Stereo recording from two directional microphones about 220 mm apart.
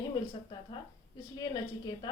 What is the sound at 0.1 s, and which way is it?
Speech, 20° left (ahead or behind).